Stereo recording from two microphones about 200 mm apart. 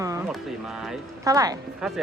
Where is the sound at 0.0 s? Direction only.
15° right (ahead or behind).